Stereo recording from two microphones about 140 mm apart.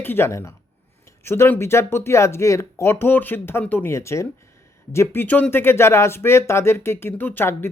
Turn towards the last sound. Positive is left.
turn(degrees=15)  # may be behind; listen again after turning